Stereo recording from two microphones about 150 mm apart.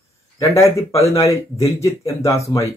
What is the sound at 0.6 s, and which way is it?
Speech, 20° left (ahead or behind).